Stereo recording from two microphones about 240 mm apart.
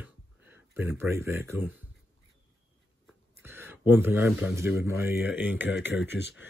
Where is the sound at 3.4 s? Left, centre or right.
Centre.